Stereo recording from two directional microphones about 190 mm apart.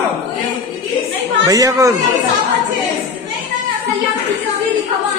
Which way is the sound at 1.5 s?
15° right (ahead or behind).